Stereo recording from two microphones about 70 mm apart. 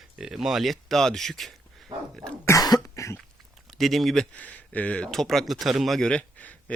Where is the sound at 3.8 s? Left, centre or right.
Centre.